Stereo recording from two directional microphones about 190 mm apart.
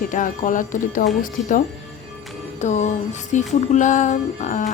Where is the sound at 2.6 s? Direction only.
40° left (ahead or behind).